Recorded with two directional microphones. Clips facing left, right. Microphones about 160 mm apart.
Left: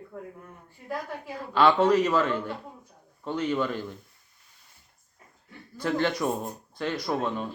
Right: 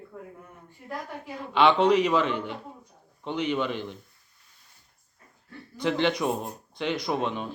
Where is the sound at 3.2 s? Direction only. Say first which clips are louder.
Even; 20° right (ahead or behind).